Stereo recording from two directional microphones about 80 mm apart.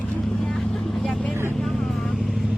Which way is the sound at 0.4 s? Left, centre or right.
Centre.